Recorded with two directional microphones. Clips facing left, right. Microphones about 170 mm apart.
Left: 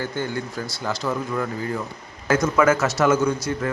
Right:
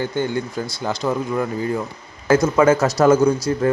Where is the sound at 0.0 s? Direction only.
20° right (ahead or behind).